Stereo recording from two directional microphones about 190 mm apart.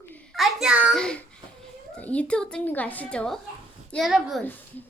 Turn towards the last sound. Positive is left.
turn(degrees=0)  # may be behind; listen again after turning